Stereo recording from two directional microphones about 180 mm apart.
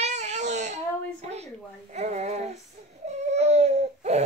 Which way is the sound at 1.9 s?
40° right (ahead or behind).